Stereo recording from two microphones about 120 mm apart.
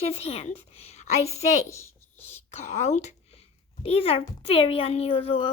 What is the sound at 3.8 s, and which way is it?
A woman's voice, 55° left (ahead or behind).